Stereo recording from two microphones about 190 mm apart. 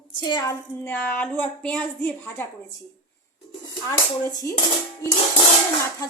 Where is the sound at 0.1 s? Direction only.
25° left (ahead or behind).